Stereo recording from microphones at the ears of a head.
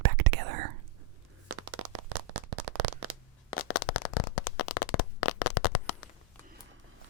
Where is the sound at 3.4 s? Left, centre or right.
Left.